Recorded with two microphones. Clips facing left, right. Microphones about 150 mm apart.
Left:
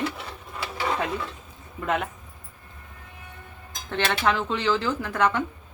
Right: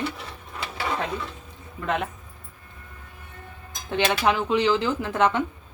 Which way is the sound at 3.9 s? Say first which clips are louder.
Right 2 dB; 15° right (ahead or behind).